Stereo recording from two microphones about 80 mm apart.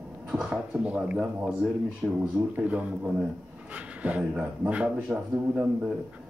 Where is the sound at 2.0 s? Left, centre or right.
Centre.